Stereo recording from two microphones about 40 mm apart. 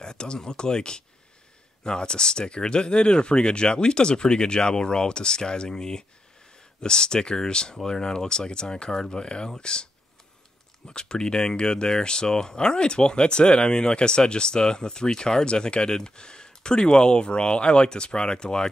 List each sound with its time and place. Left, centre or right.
0.0 s speech: centre
10.9 s speech: left